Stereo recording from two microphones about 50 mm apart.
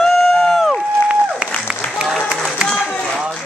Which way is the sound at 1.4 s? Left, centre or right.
Right.